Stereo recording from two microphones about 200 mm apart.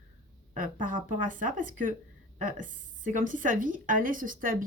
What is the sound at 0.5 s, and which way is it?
A woman's voice, 40° right (ahead or behind).